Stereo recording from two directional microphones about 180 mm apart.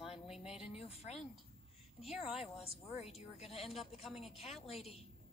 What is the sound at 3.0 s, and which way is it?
Speech, 35° left (ahead or behind).